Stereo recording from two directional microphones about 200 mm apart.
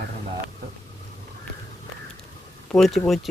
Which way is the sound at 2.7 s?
Centre (ahead or behind).